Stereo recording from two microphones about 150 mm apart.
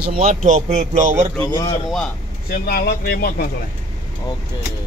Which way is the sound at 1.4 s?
25° left (ahead or behind).